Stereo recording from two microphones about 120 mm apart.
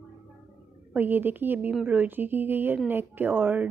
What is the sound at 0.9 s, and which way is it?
A woman's voice, 15° right (ahead or behind).